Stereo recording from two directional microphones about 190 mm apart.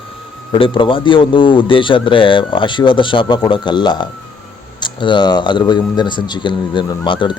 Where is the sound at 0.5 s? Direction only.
25° left (ahead or behind).